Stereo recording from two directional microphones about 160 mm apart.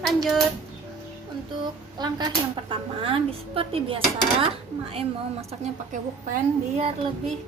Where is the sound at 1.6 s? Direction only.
25° right (ahead or behind).